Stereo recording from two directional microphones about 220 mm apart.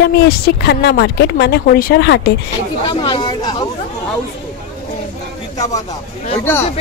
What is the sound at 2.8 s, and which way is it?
Speech, 20° left (ahead or behind).